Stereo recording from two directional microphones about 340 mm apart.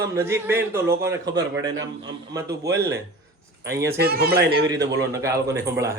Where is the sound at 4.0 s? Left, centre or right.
Right.